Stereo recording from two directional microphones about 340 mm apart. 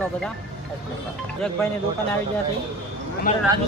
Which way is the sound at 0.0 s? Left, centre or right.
Centre.